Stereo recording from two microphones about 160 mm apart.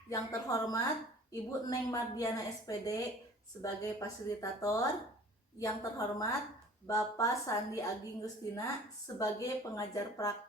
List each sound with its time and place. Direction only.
0.1 s a woman's voice: 20° left (ahead or behind)